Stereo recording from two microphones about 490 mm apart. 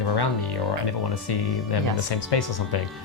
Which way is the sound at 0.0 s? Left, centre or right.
Left.